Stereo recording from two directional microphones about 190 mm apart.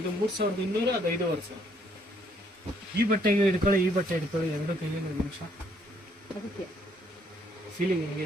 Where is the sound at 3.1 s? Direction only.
45° right (ahead or behind).